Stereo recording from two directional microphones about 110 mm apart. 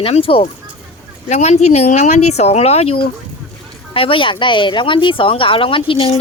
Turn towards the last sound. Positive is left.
turn(degrees=55)  # may be behind; listen again after turning